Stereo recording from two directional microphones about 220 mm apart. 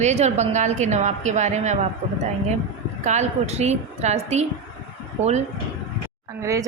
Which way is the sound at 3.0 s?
30° right (ahead or behind).